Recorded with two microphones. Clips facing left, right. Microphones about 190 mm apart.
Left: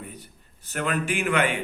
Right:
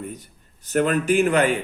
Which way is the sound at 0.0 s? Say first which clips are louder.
Right 7 dB; 45° right (ahead or behind).